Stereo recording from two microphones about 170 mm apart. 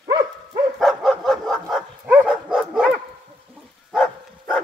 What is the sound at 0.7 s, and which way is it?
Dog, centre (ahead or behind).